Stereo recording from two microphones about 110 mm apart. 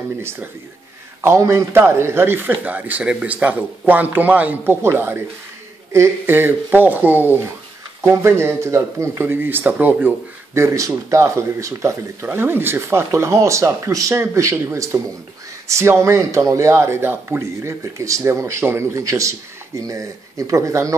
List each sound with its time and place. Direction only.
0.2 s a man's voice: 20° right (ahead or behind)